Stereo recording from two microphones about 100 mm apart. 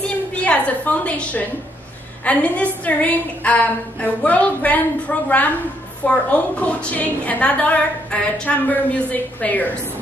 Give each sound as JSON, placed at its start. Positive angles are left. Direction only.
{"t": 0.4, "sound": "a woman's voice", "side_deg": 15}